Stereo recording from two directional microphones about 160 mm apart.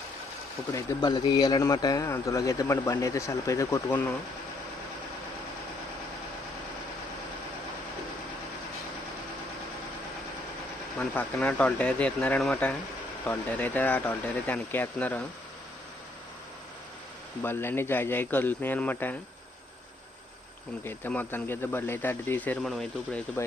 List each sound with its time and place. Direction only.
0.7 s a man's voice: 25° left (ahead or behind)
11.1 s speech: 10° left (ahead or behind)
17.4 s speech: 15° left (ahead or behind)
20.8 s speech: 10° left (ahead or behind)